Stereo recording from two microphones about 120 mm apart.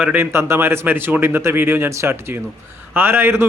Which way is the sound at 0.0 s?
15° right (ahead or behind).